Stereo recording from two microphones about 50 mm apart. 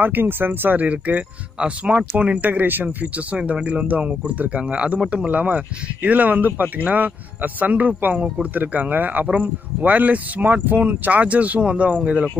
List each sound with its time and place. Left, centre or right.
0.0 s a man's voice: right
0.8 s speech: right
3.3 s speech: centre
3.6 s a man's voice: right